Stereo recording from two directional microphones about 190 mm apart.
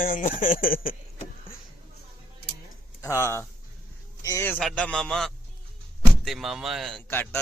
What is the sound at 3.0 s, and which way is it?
A man's voice, 15° left (ahead or behind).